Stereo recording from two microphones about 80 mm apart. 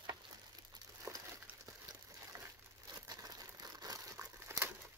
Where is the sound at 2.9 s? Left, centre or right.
Right.